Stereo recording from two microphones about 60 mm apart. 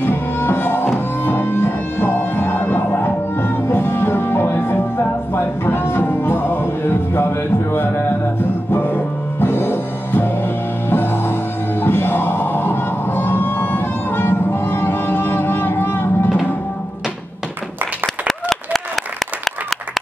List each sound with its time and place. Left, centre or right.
0.0 s music: left
18.0 s applause: centre